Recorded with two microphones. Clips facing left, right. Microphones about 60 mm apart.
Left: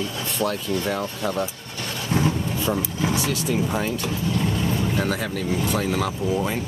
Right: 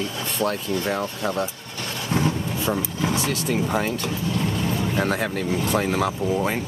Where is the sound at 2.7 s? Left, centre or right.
Right.